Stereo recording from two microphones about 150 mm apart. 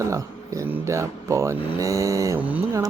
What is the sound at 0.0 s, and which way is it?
Speech, 20° right (ahead or behind).